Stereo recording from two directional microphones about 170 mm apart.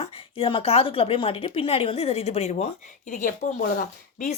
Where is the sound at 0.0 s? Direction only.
35° left (ahead or behind); by 4.3 s 50° left (ahead or behind).